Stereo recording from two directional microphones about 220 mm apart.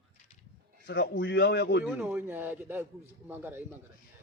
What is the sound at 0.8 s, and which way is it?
Speech, 50° left (ahead or behind).